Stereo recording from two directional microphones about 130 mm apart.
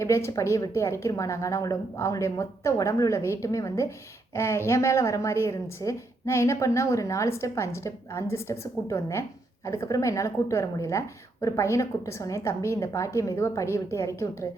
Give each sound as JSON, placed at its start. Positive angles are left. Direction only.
{"t": 0.0, "sound": "a woman's voice", "side_deg": 20}